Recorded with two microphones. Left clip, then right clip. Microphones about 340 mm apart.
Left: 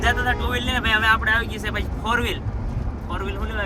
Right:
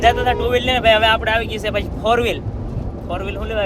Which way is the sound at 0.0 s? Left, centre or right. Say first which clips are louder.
Right 6 dB; centre.